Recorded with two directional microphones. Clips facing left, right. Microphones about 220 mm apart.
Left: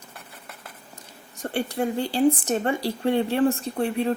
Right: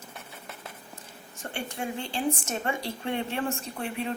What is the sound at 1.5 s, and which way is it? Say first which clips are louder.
A woman's voice: left 9 dB; 35° left (ahead or behind).